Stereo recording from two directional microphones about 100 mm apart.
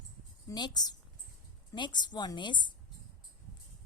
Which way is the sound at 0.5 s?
45° left (ahead or behind).